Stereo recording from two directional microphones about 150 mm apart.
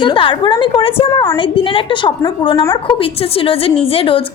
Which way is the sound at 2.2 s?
25° left (ahead or behind).